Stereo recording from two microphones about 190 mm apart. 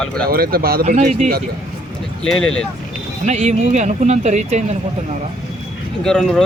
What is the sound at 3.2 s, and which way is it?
Speech, 35° right (ahead or behind).